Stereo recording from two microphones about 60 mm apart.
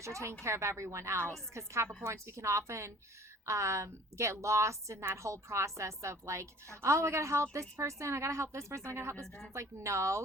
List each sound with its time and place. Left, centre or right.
0.0 s a woman's voice: right